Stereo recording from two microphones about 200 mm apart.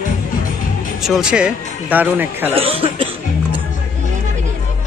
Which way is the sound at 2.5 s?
30° right (ahead or behind).